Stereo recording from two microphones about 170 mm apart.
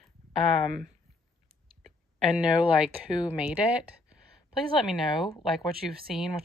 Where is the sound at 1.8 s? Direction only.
Centre (ahead or behind).